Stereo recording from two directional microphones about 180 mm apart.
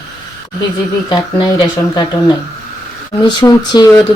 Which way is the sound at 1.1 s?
25° left (ahead or behind).